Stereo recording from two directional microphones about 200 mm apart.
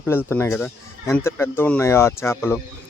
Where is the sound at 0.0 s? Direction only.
10° left (ahead or behind).